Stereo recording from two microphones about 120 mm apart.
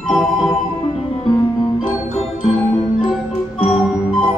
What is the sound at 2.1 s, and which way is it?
Music, 60° left (ahead or behind).